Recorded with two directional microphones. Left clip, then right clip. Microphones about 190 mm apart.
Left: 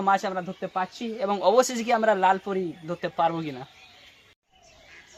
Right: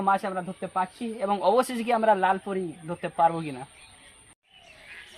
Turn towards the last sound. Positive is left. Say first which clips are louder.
# right 2 dB
turn(degrees=5)  # may be behind; listen again after turning